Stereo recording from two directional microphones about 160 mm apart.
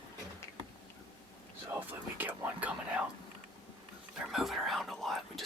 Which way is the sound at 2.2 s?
10° right (ahead or behind).